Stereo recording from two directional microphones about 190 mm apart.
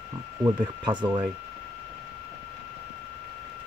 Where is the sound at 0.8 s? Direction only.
25° right (ahead or behind).